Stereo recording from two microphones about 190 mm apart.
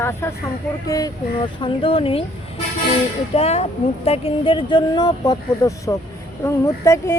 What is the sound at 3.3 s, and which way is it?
Speech, 35° left (ahead or behind).